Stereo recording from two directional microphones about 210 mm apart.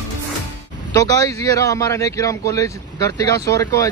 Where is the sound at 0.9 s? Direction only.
15° left (ahead or behind).